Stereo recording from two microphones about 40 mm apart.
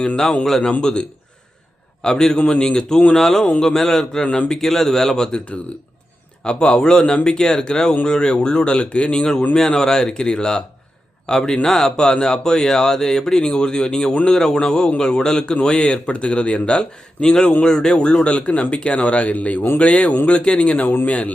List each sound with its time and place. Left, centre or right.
0.4 s speech: centre
0.8 s a man's voice: centre
3.2 s speech: centre
6.4 s speech: left
9.6 s speech: centre; by 21.3 s left